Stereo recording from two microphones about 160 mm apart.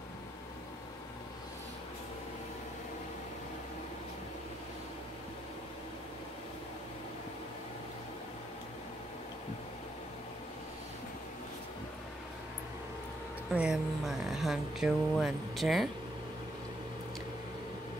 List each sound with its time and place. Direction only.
13.6 s speech: 5° right (ahead or behind)